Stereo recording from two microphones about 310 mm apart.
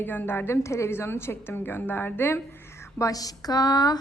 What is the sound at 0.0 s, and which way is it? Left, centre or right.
A woman's voice, centre.